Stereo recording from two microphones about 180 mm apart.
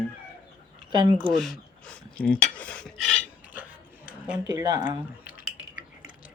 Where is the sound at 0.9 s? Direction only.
25° right (ahead or behind).